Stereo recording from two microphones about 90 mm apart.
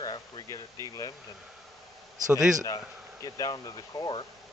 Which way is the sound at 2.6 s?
40° left (ahead or behind).